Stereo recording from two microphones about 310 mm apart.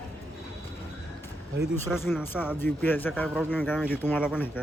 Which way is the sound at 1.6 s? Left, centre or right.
Centre.